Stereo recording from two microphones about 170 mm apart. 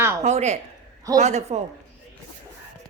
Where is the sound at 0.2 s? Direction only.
40° right (ahead or behind).